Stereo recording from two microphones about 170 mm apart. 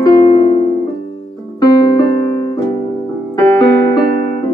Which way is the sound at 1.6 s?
25° left (ahead or behind).